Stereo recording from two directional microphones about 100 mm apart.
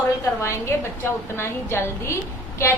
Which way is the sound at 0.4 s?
25° left (ahead or behind).